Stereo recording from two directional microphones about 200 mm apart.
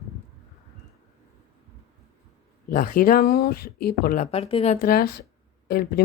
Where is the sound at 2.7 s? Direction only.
45° left (ahead or behind).